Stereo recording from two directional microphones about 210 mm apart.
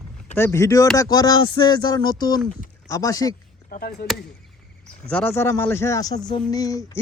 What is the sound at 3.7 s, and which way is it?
Speech, 45° left (ahead or behind).